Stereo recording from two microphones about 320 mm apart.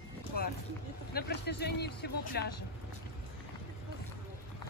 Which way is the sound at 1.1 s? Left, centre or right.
Left.